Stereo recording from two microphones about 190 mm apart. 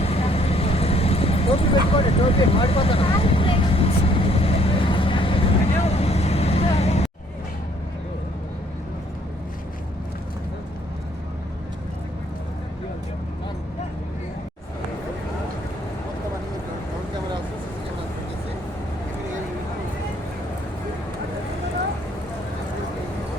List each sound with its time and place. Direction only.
0.0 s vehicle: 30° left (ahead or behind)